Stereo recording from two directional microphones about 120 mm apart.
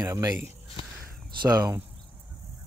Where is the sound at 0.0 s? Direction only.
30° right (ahead or behind).